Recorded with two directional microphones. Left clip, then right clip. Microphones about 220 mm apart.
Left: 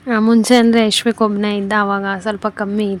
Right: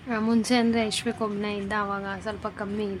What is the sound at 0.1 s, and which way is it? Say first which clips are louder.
A woman's voice: left 12 dB; 35° left (ahead or behind).